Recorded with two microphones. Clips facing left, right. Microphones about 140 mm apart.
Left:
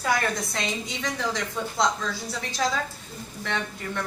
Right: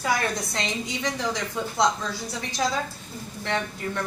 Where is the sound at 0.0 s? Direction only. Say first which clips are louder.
Even; 20° right (ahead or behind).